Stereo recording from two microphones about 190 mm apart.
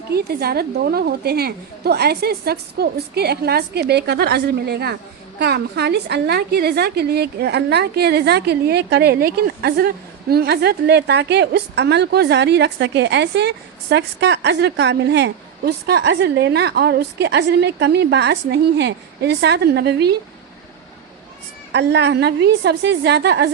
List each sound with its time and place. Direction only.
0.1 s a woman's voice: 55° right (ahead or behind)
21.7 s a woman's voice: 65° right (ahead or behind)